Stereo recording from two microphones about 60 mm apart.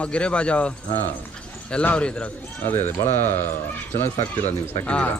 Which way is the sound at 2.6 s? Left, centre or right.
Left.